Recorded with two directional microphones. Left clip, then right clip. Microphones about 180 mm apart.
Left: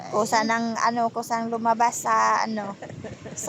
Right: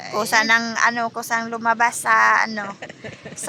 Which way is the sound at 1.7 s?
10° left (ahead or behind).